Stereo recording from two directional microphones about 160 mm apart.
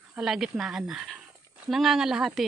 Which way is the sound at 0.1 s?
5° right (ahead or behind).